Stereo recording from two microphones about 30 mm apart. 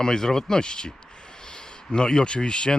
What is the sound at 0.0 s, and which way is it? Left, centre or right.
Speech, left.